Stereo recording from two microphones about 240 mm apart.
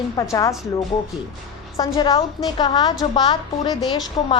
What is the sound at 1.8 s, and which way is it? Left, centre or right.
A woman's voice, centre.